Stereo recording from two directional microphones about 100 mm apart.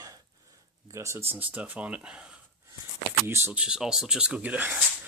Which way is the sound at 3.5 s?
10° right (ahead or behind).